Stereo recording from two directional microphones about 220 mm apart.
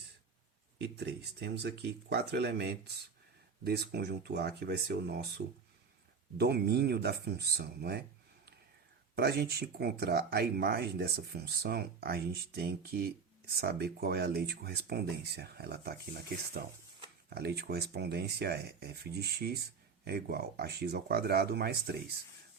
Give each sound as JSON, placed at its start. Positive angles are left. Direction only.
{"t": 0.8, "sound": "speech", "side_deg": -50}
{"t": 9.1, "sound": "speech", "side_deg": -45}